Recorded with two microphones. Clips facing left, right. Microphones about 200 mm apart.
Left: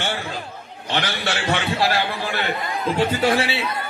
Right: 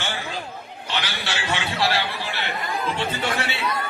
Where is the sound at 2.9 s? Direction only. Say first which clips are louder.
Left 7 dB; 35° left (ahead or behind).